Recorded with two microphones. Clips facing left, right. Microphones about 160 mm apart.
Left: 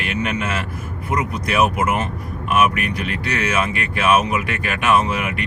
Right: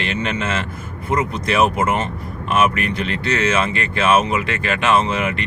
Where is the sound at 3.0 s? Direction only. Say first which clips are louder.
Right 3 dB; 15° left (ahead or behind).